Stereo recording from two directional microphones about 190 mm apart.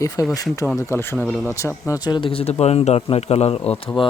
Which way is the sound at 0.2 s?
20° left (ahead or behind).